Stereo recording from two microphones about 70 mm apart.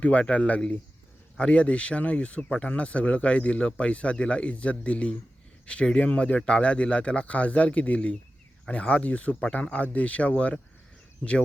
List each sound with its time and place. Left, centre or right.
0.0 s speech: centre